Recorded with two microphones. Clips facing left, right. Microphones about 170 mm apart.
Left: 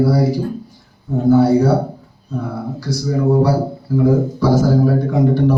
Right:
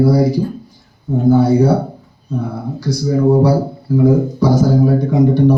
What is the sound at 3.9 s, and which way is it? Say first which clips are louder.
Speech: right 2 dB; 15° right (ahead or behind).